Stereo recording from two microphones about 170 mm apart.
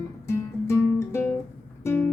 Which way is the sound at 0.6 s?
15° left (ahead or behind).